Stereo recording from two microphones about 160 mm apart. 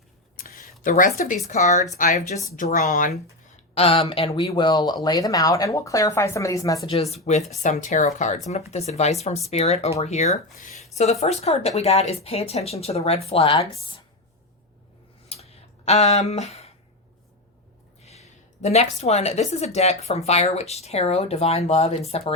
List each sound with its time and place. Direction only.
0.3 s a sound: 65° left (ahead or behind)
0.8 s speech: 60° left (ahead or behind)
1.4 s speech: 50° left (ahead or behind)
3.8 s speech: 35° left (ahead or behind); by 6.7 s 20° left (ahead or behind)
6.8 s speech: 40° left (ahead or behind)
15.3 s a sound: 40° left (ahead or behind)
18.0 s speech: 40° left (ahead or behind)